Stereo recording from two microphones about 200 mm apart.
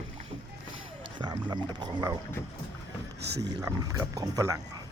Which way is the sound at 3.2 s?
55° right (ahead or behind).